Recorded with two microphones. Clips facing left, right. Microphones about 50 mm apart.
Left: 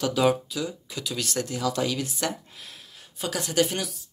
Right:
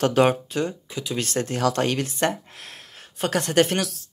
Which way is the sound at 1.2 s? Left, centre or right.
Right.